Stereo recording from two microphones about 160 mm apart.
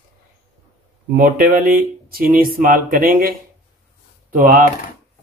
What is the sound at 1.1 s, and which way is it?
Speech, 60° right (ahead or behind).